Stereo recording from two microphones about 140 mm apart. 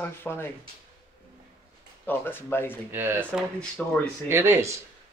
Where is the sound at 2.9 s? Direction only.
15° right (ahead or behind).